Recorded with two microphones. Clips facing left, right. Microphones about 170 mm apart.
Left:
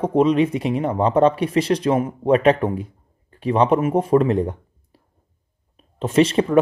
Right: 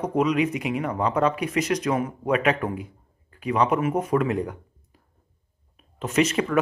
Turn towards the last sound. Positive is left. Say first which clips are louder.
# left 6 dB
turn(degrees=30)  # may be behind; listen again after turning